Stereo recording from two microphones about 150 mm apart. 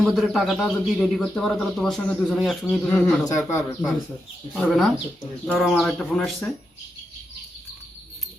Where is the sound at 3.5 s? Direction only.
20° left (ahead or behind).